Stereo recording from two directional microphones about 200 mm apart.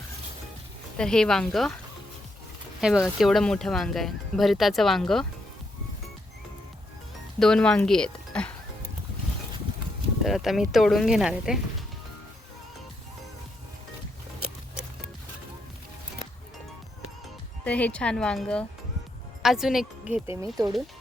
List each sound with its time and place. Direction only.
0.9 s speech: 5° left (ahead or behind)
2.8 s speech: centre (ahead or behind)
7.3 s speech: 5° left (ahead or behind)
10.2 s speech: centre (ahead or behind)
17.6 s speech: 5° left (ahead or behind)
20.2 s speech: 25° left (ahead or behind)